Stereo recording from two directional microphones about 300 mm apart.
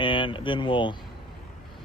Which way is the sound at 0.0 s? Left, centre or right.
Centre.